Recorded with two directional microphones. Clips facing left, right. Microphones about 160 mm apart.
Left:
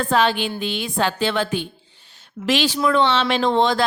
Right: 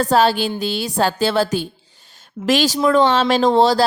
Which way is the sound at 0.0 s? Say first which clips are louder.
Right 4 dB; 40° right (ahead or behind).